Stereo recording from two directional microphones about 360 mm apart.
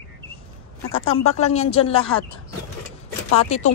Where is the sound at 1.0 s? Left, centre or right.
Left.